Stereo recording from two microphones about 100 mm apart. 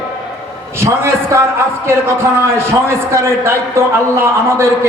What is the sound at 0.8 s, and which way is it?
Speech, 25° right (ahead or behind).